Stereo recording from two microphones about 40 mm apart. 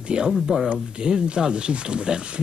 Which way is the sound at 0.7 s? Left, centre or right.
Right.